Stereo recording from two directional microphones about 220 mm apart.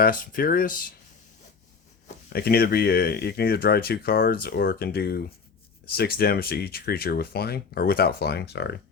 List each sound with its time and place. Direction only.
0.0 s speech: 40° left (ahead or behind)
2.0 s speech: 45° left (ahead or behind)